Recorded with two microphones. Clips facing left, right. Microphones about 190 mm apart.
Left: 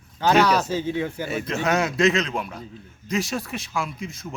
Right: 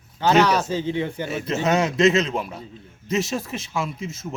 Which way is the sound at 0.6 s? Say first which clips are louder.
Even; 15° right (ahead or behind).